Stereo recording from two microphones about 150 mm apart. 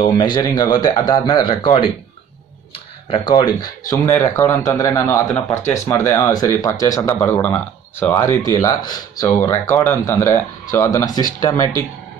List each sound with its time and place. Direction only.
0.0 s speech: 30° left (ahead or behind)